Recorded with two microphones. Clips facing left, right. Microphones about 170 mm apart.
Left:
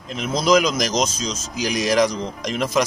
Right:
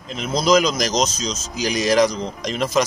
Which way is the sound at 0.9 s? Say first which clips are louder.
Right 1 dB; 35° right (ahead or behind).